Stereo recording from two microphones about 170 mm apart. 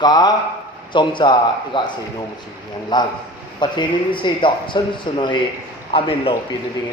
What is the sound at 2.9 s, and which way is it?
A man's voice, 25° left (ahead or behind).